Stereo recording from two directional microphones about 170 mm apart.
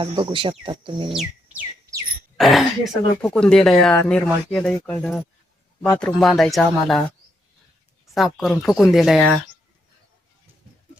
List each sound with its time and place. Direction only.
0.0 s speech: 30° right (ahead or behind)
1.1 s bird: centre (ahead or behind)
2.4 s speech: centre (ahead or behind)
8.1 s speech: centre (ahead or behind)